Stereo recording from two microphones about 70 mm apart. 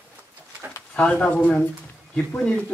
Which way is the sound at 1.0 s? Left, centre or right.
Left.